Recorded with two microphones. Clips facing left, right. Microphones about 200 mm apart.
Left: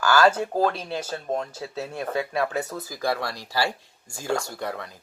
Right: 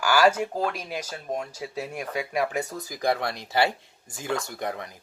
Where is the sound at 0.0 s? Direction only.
10° right (ahead or behind).